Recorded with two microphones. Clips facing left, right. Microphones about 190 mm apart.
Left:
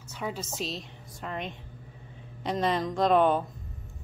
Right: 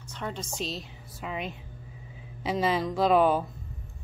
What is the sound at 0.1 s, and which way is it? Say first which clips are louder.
A woman's voice: left 1 dB; 5° left (ahead or behind).